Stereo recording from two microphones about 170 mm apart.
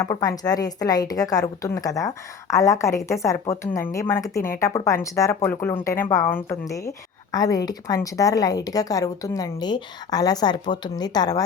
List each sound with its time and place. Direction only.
0.0 s a woman's voice: 20° left (ahead or behind)